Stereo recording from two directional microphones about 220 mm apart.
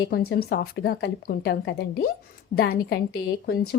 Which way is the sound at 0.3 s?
45° left (ahead or behind).